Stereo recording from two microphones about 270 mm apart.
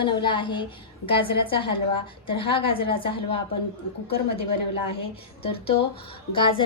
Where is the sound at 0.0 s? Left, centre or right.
Centre.